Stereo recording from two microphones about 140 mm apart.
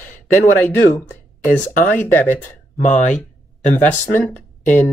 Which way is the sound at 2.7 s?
60° left (ahead or behind).